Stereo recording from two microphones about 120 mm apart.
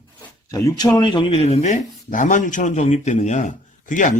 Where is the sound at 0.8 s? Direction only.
35° left (ahead or behind).